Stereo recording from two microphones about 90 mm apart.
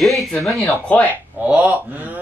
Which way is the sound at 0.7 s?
15° left (ahead or behind).